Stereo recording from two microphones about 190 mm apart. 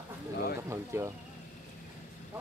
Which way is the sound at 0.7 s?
15° right (ahead or behind).